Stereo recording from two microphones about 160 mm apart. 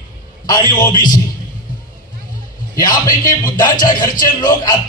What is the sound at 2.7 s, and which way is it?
A man's voice, 25° left (ahead or behind).